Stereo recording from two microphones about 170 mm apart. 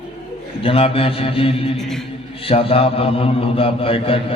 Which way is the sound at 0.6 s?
35° left (ahead or behind).